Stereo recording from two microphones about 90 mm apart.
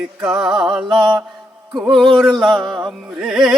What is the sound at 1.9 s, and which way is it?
Music, 65° right (ahead or behind).